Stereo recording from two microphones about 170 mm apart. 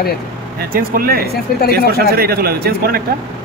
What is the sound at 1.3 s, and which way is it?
Speech, 65° left (ahead or behind).